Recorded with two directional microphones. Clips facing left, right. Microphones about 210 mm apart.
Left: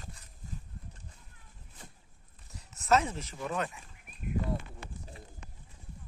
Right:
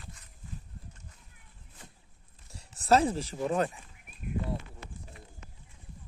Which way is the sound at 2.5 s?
30° right (ahead or behind).